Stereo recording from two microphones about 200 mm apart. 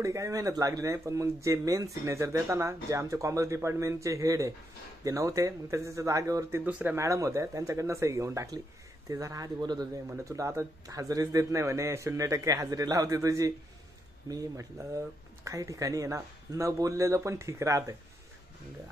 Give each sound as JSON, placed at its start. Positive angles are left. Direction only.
{"t": 0.0, "sound": "speech", "side_deg": -15}